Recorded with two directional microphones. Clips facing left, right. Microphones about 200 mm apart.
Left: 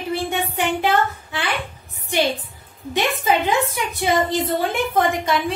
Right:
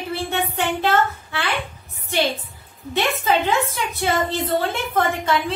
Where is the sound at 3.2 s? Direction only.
15° left (ahead or behind).